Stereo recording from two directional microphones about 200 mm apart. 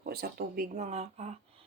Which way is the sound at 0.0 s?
50° right (ahead or behind).